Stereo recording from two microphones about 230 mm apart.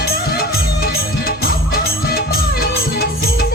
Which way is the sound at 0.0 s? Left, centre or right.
Left.